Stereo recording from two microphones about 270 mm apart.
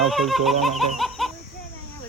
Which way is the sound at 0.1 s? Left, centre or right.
Centre.